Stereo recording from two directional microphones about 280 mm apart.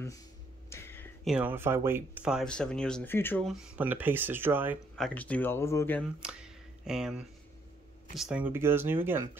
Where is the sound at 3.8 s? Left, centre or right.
Centre.